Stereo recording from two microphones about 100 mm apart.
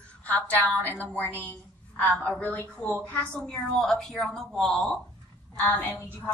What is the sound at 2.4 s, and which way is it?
A woman's voice, 15° left (ahead or behind).